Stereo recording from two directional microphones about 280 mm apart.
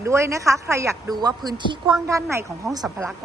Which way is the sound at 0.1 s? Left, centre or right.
Centre.